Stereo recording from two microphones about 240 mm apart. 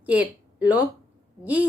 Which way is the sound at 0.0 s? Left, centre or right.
Centre.